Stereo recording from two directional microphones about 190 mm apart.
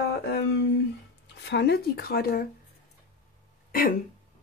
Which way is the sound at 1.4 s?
60° left (ahead or behind).